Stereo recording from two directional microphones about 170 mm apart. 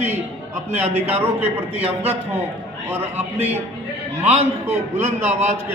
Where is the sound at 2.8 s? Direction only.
10° right (ahead or behind).